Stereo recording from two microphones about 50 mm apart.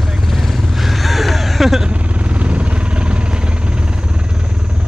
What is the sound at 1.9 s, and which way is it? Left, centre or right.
Vehicle, right.